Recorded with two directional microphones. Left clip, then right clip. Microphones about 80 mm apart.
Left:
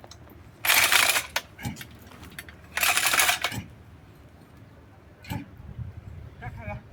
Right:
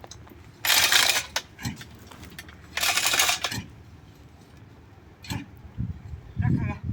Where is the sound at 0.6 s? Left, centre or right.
Right.